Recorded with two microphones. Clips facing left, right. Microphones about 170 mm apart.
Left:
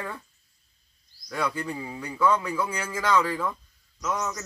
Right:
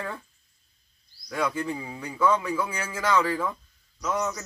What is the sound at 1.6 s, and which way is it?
A man's voice, centre (ahead or behind).